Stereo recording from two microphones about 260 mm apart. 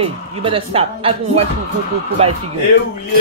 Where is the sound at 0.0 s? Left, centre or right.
Right.